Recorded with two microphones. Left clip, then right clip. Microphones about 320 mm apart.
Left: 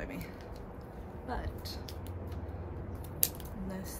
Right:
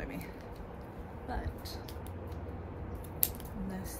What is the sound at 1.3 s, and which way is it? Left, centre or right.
Speech, centre.